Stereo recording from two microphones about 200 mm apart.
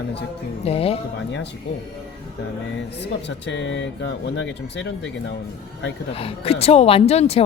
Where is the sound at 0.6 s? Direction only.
30° left (ahead or behind).